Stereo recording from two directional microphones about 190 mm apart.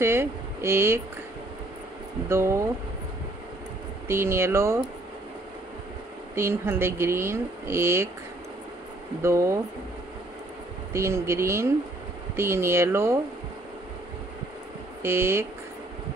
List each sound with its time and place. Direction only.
0.0 s speech: 15° right (ahead or behind)
2.2 s speech: 15° right (ahead or behind)
4.1 s speech: 15° right (ahead or behind)
6.3 s speech: 15° right (ahead or behind)
9.2 s speech: 15° right (ahead or behind)
10.9 s speech: 15° right (ahead or behind)
15.0 s speech: 15° right (ahead or behind)